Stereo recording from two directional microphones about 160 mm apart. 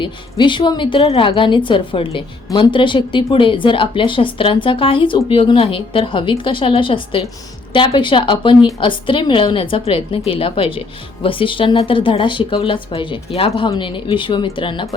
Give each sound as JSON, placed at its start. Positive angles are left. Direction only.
{"t": 0.0, "sound": "a woman's voice", "side_deg": 30}